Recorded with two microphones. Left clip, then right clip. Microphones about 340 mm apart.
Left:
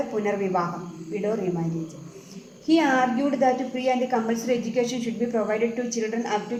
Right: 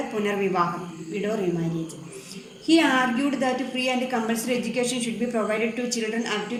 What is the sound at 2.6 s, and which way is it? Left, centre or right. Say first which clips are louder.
A woman's voice: even; left.